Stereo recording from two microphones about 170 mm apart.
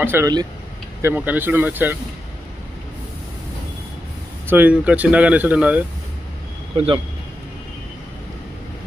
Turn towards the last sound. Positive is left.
turn(degrees=-30)  # may be behind; listen again after turning